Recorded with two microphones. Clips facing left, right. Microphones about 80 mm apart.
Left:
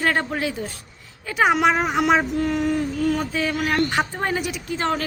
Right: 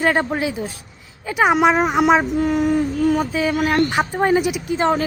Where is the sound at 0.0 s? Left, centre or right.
Centre.